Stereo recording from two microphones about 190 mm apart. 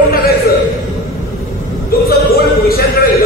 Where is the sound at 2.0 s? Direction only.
50° left (ahead or behind).